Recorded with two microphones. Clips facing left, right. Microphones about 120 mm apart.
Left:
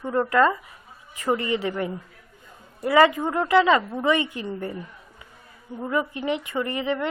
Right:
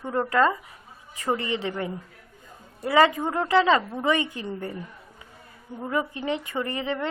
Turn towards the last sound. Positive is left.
turn(degrees=-30)  # may be behind; listen again after turning